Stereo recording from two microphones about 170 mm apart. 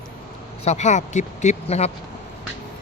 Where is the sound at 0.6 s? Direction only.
45° left (ahead or behind).